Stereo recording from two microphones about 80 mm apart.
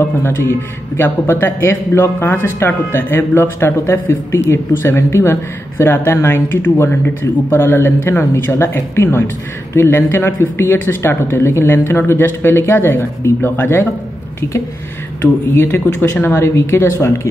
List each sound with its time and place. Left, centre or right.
0.2 s speech: left
15.5 s speech: left